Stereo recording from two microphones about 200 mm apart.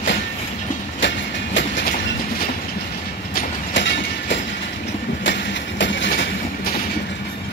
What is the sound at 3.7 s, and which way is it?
Train, 65° left (ahead or behind).